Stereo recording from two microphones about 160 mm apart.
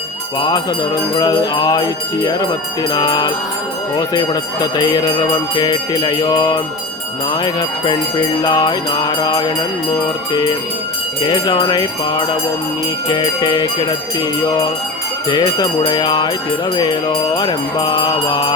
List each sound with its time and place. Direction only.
0.3 s music: 25° left (ahead or behind)
11.3 s music: 30° left (ahead or behind)